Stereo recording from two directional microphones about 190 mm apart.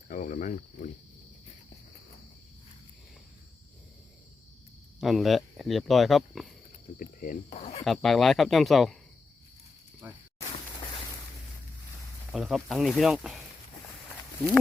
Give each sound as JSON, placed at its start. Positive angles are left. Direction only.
{"t": 0.1, "sound": "speech", "side_deg": 45}
{"t": 4.9, "sound": "speech", "side_deg": 0}
{"t": 7.0, "sound": "speech", "side_deg": 45}
{"t": 7.9, "sound": "speech", "side_deg": 0}
{"t": 10.0, "sound": "speech", "side_deg": -10}
{"t": 12.3, "sound": "speech", "side_deg": 0}